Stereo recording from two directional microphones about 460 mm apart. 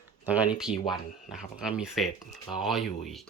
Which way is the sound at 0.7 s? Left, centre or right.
Centre.